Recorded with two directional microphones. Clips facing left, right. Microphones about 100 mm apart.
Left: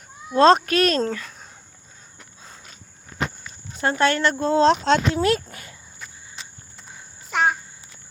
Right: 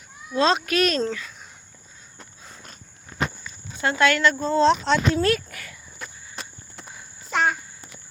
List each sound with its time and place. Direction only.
0.3 s speech: 45° left (ahead or behind)
3.8 s speech: 40° left (ahead or behind)
4.4 s speech: 75° left (ahead or behind)
5.1 s speech: 25° left (ahead or behind)
6.0 s walk: 60° right (ahead or behind)
7.3 s a sound: 5° left (ahead or behind)